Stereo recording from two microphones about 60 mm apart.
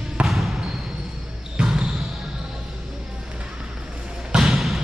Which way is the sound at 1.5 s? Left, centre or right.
Centre.